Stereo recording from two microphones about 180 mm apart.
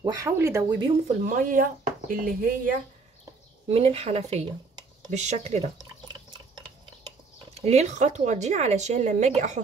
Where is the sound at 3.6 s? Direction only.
35° right (ahead or behind).